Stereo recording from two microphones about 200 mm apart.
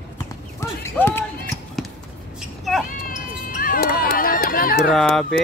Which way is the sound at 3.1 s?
45° left (ahead or behind).